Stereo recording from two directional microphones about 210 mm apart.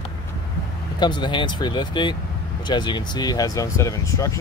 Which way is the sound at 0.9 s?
20° left (ahead or behind).